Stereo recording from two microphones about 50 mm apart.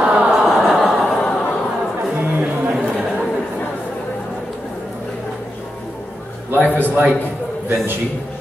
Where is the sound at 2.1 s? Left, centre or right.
Right.